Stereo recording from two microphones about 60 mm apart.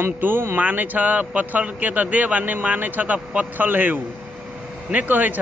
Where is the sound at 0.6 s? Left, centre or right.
Right.